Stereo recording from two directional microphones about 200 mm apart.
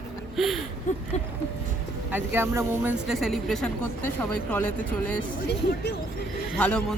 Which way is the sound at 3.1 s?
Centre (ahead or behind).